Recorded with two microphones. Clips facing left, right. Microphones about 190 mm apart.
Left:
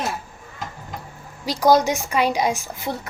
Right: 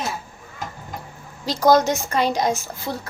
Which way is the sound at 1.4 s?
10° left (ahead or behind).